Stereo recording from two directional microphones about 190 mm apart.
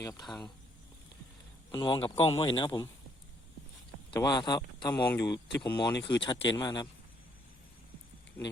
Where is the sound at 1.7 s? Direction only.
25° left (ahead or behind).